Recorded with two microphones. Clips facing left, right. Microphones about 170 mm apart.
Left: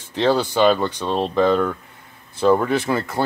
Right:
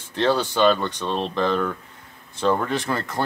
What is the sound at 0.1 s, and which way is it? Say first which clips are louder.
Speech: left 3 dB; 10° left (ahead or behind).